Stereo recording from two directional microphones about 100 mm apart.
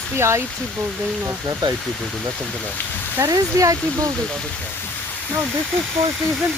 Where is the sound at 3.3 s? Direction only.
35° right (ahead or behind).